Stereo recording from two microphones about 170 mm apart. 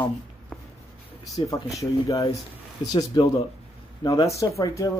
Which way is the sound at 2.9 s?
20° left (ahead or behind).